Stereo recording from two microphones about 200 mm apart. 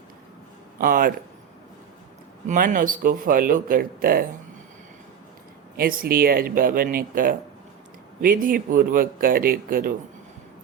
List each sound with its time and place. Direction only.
0.8 s speech: 45° right (ahead or behind)
2.5 s speech: 40° right (ahead or behind)
5.7 s speech: 45° right (ahead or behind)